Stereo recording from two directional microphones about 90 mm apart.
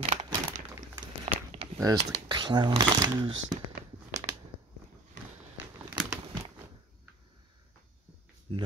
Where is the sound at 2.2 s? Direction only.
60° right (ahead or behind).